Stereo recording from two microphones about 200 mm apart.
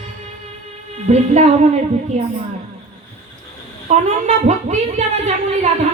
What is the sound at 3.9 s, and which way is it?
A woman's voice, 35° right (ahead or behind).